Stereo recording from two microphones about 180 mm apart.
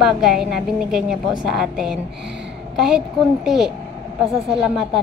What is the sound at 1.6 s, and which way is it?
A woman's voice, 5° right (ahead or behind).